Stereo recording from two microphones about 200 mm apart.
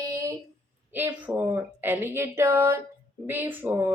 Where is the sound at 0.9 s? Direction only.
10° right (ahead or behind).